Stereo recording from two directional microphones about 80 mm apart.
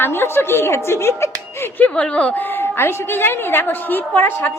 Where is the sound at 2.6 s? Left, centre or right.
Left.